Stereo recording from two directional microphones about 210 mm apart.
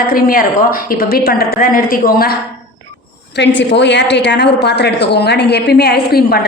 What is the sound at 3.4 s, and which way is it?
A woman's voice, 55° left (ahead or behind).